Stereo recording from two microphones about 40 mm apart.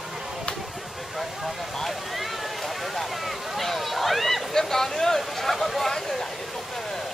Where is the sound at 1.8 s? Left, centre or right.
Centre.